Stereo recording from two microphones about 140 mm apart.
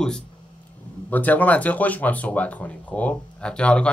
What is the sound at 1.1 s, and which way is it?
Speech, 10° left (ahead or behind).